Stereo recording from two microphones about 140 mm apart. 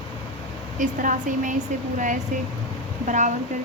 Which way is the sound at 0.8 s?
70° right (ahead or behind).